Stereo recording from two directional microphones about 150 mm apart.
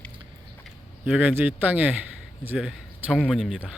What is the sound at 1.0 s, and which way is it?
Speech, 10° right (ahead or behind).